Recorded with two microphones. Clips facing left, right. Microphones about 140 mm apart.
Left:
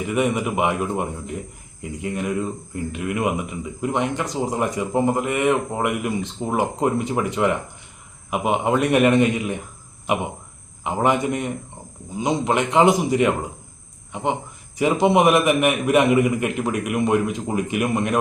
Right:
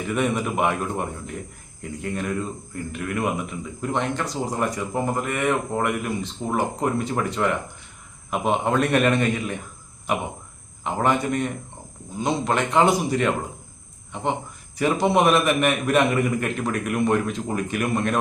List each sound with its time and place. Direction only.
0.1 s speech: 15° left (ahead or behind)
10.8 s speech: 15° left (ahead or behind)